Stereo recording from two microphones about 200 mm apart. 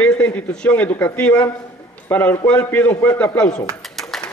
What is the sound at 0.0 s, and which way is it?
A man's voice, 5° left (ahead or behind).